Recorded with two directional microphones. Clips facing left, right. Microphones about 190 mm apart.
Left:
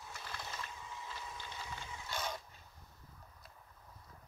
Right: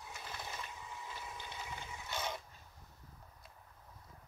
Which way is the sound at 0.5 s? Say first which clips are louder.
Even; 15° right (ahead or behind).